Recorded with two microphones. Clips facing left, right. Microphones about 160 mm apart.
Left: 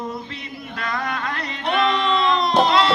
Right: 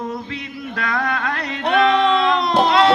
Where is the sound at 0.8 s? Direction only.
60° right (ahead or behind).